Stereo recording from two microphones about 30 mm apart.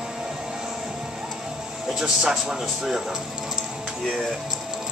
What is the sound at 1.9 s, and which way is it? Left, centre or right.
Speech, right.